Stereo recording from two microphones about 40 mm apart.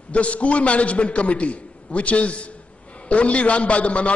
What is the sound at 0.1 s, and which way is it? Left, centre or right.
A man's voice, left.